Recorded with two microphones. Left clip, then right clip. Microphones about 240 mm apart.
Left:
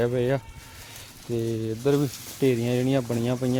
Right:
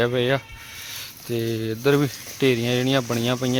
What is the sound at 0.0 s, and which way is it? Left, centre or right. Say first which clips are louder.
Speech: right 3 dB; centre.